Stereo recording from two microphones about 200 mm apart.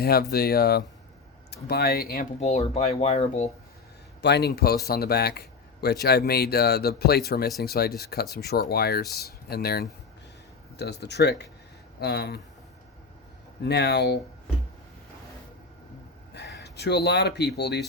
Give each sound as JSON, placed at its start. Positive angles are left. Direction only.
{"t": 0.0, "sound": "speech", "side_deg": 50}
{"t": 2.4, "sound": "speech", "side_deg": 35}
{"t": 4.2, "sound": "speech", "side_deg": 55}
{"t": 13.6, "sound": "speech", "side_deg": 55}
{"t": 16.3, "sound": "speech", "side_deg": 55}